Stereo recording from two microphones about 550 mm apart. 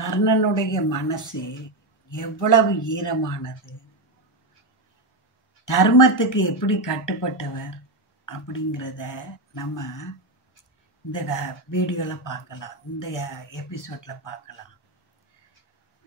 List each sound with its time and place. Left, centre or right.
0.0 s speech: left
5.7 s speech: left
11.1 s speech: left